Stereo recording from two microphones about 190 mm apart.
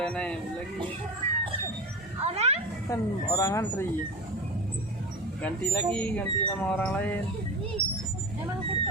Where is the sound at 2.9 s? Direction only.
15° left (ahead or behind).